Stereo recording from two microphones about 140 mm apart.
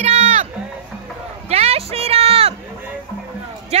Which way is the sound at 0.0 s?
50° right (ahead or behind).